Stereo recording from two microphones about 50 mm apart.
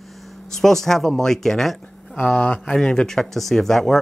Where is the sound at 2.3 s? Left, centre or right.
Left.